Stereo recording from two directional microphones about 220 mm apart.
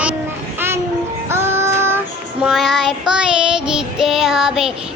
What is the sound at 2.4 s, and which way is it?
Child singing, centre (ahead or behind).